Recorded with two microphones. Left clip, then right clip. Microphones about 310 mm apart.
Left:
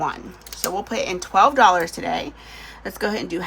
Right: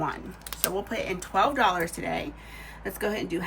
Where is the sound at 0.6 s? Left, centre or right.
Centre.